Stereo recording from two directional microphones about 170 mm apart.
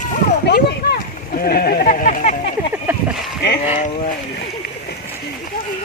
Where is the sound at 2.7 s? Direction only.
10° right (ahead or behind).